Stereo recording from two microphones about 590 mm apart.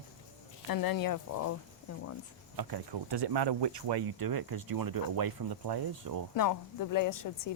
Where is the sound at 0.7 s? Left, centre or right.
Left.